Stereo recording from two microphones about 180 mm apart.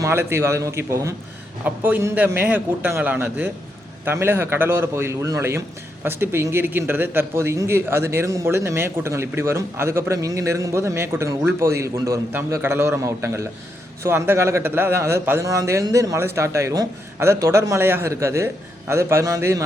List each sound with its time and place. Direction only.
0.0 s a man's voice: 15° right (ahead or behind)